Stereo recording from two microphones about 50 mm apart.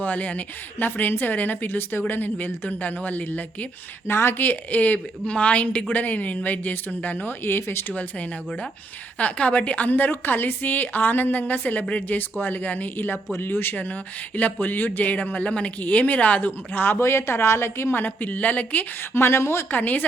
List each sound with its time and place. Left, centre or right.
0.0 s speech: left
4.0 s a woman's voice: left
4.4 s speech: left
9.1 s speech: left
13.3 s speech: left
13.7 s speech: left
17.0 s a woman's voice: left
17.9 s speech: left
19.1 s a woman's voice: left
19.7 s speech: left